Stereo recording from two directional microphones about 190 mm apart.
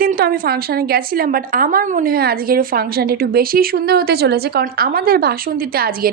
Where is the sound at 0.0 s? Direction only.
50° right (ahead or behind).